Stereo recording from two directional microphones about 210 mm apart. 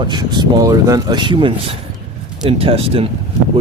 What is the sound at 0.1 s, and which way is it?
Speech, 20° right (ahead or behind).